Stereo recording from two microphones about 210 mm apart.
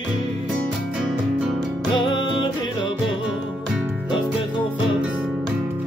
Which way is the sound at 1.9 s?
25° left (ahead or behind).